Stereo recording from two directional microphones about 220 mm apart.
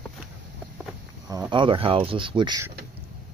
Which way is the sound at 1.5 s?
25° right (ahead or behind).